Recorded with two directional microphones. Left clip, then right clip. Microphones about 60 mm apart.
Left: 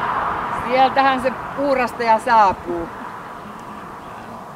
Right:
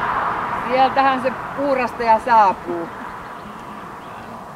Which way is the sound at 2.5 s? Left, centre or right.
Centre.